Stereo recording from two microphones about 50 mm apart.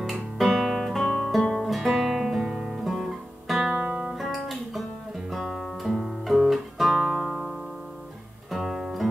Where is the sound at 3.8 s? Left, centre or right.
Right.